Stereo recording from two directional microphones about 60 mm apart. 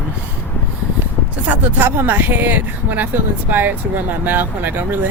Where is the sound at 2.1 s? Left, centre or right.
Right.